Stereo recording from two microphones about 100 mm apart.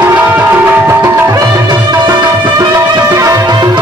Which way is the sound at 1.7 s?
40° right (ahead or behind).